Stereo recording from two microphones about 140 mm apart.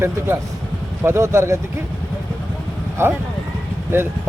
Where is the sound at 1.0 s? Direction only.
20° right (ahead or behind).